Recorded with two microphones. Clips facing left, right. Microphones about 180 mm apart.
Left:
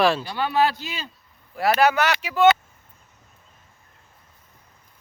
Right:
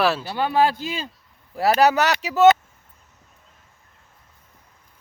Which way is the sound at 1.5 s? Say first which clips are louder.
Right 2 dB; 35° right (ahead or behind).